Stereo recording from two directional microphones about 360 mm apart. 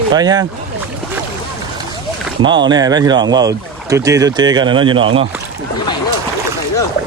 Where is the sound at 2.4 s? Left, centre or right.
Centre.